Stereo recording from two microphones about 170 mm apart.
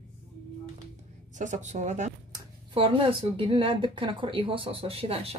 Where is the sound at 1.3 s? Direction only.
45° right (ahead or behind).